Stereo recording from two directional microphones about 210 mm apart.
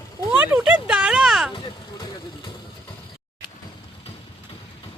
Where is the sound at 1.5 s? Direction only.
25° left (ahead or behind).